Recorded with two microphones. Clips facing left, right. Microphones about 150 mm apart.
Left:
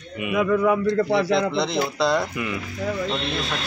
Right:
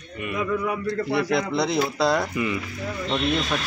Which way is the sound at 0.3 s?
75° left (ahead or behind).